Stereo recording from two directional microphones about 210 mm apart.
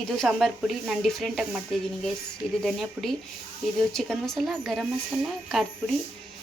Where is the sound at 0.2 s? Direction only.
Centre (ahead or behind).